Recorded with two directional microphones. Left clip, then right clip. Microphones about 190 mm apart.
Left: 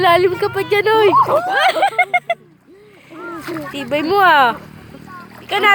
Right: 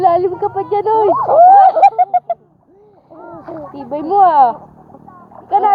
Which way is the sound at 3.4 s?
50° left (ahead or behind).